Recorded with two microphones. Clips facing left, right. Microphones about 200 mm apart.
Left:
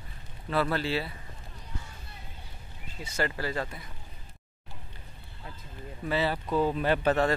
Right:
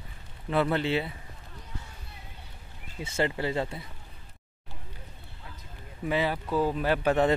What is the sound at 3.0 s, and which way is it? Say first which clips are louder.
Speech: right 3 dB; 25° right (ahead or behind).